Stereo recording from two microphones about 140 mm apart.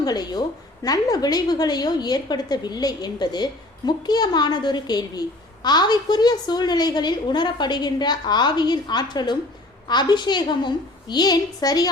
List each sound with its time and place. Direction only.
0.0 s a woman's voice: 30° left (ahead or behind)